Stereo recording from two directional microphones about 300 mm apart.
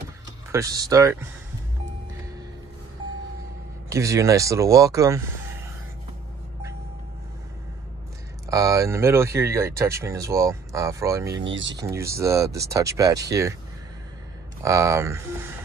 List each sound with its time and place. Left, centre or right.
0.5 s speech: centre
3.9 s speech: centre
8.5 s speech: centre
11.2 s speech: right
11.7 s speech: centre
14.6 s speech: centre